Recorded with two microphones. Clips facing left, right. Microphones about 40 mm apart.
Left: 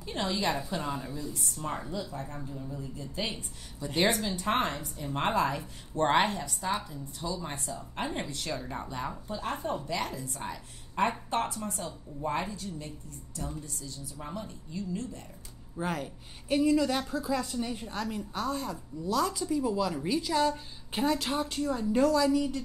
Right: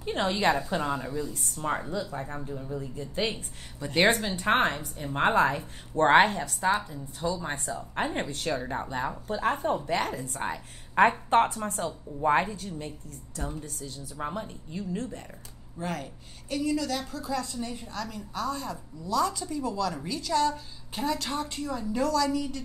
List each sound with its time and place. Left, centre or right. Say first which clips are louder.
0.0 s speech: right 5 dB; right
1.3 s speech: right 4 dB; right
1.9 s speech: right 4 dB; right
14.2 s speech: right 6 dB; right
15.8 s a woman's voice: left 1 dB; centre
16.4 s a woman's voice: left 3 dB; left